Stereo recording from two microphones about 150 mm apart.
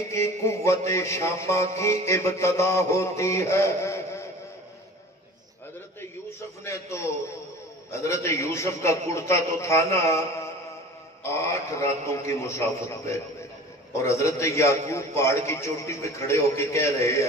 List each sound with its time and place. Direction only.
0.1 s a man's voice: 20° left (ahead or behind)
6.6 s a man's voice: 20° left (ahead or behind)
11.2 s a man's voice: 20° left (ahead or behind)